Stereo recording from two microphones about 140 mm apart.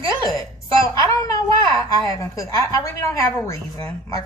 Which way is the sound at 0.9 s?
25° left (ahead or behind).